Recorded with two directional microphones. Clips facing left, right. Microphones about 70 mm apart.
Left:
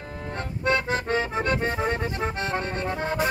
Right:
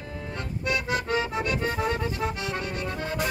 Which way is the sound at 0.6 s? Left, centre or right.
Left.